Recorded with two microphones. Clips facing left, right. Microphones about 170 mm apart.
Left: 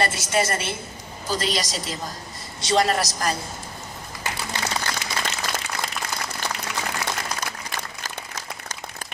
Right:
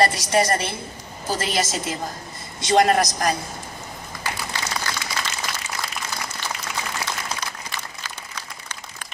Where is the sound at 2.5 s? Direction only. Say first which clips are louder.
Right 4 dB; 50° right (ahead or behind).